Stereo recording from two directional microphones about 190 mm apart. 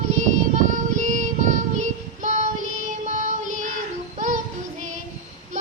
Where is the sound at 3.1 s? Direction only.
40° right (ahead or behind).